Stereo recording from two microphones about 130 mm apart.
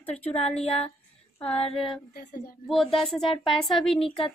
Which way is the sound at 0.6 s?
50° left (ahead or behind).